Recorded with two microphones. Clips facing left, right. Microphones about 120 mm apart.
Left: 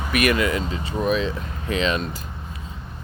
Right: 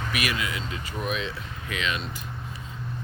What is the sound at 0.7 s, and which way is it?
Speech, 35° left (ahead or behind).